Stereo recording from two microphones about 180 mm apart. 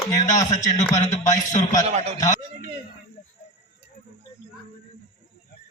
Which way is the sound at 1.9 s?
35° right (ahead or behind).